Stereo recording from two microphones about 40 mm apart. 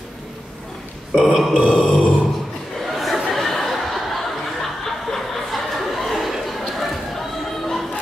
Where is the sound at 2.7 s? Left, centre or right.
Centre.